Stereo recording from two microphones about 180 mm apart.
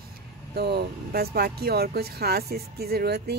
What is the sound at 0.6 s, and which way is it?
Speech, 65° right (ahead or behind).